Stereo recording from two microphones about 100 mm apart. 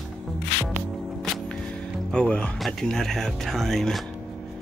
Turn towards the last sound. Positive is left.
turn(degrees=0)  # may be behind; listen again after turning